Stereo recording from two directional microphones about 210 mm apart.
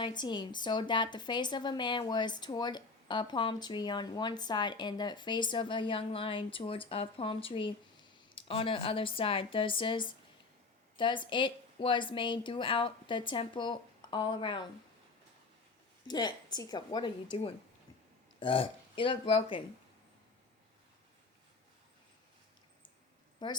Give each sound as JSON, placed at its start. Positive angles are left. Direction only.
{"t": 0.0, "sound": "a woman's voice", "side_deg": 20}
{"t": 16.0, "sound": "a woman's voice", "side_deg": 20}
{"t": 18.3, "sound": "a woman's voice", "side_deg": 25}
{"t": 23.4, "sound": "a woman's voice", "side_deg": 20}